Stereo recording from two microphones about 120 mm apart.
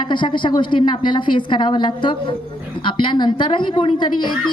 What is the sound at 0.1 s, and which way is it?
A woman's voice, 40° left (ahead or behind).